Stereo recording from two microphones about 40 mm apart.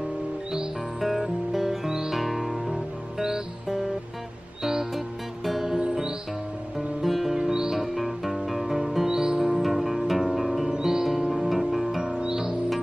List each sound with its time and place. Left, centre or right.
1.0 s music: centre
4.9 s music: centre
7.0 s music: centre
7.3 s music: centre
7.7 s music: centre
9.4 s music: centre
10.7 s music: centre
11.1 s music: centre
12.0 s music: centre